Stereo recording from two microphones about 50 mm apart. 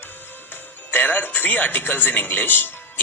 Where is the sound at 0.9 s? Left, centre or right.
Left.